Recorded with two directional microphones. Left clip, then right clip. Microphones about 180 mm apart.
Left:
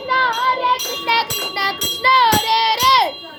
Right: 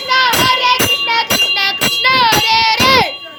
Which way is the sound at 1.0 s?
5° left (ahead or behind).